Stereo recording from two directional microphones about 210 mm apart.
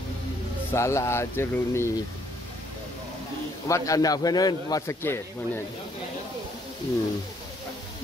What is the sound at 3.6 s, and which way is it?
A man's voice, 15° left (ahead or behind).